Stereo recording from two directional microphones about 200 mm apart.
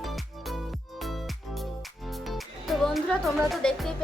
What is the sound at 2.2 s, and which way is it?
Music, centre (ahead or behind).